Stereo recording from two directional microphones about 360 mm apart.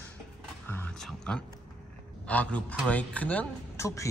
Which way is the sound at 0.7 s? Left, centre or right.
Centre.